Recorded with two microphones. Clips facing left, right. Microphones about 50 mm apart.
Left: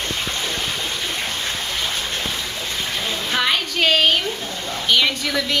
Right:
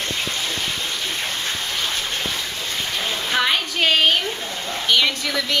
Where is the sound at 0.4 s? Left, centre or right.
Centre.